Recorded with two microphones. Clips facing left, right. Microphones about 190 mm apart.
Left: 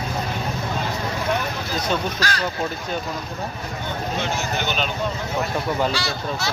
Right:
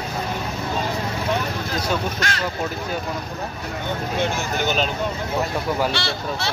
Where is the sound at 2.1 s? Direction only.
25° right (ahead or behind).